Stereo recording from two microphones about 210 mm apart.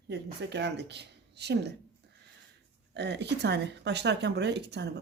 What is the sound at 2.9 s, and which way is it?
Speech, 55° right (ahead or behind).